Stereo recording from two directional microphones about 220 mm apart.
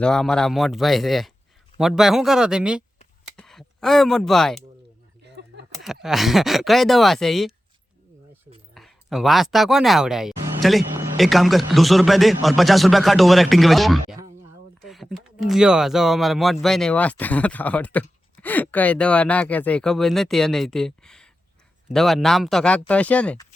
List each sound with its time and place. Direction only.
0.0 s speech: 5° left (ahead or behind)
5.2 s a sound: 50° right (ahead or behind)
5.8 s speech: centre (ahead or behind)
8.7 s speech: centre (ahead or behind)